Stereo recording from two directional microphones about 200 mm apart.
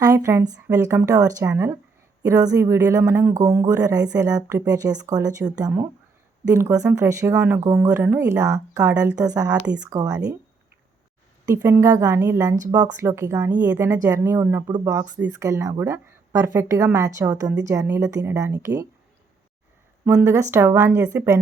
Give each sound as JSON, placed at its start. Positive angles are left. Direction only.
{"t": 0.0, "sound": "speech", "side_deg": -15}
{"t": 8.9, "sound": "speech", "side_deg": -5}
{"t": 9.2, "sound": "speech", "side_deg": -20}
{"t": 11.4, "sound": "speech", "side_deg": -10}
{"t": 20.1, "sound": "speech", "side_deg": -15}